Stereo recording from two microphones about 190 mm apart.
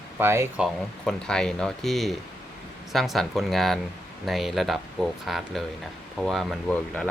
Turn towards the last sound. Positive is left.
turn(degrees=5)  # may be behind; listen again after turning